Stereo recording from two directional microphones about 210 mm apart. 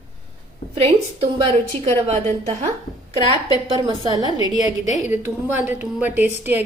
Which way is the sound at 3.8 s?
20° right (ahead or behind).